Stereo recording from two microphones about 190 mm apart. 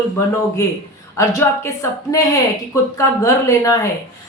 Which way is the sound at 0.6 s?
15° left (ahead or behind).